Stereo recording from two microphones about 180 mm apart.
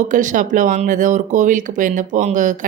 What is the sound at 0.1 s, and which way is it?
A woman's voice, 45° right (ahead or behind).